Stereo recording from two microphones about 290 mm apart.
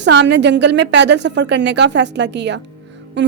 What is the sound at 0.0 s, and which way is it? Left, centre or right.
Speech, right.